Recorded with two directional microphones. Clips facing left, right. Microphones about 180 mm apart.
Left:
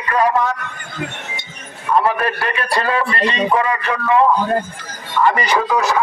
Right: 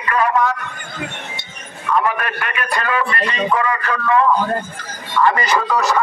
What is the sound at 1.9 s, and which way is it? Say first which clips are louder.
A man's voice: left 3 dB; 35° left (ahead or behind).